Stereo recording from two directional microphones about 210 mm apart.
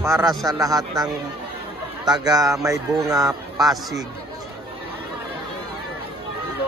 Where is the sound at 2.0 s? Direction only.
5° right (ahead or behind).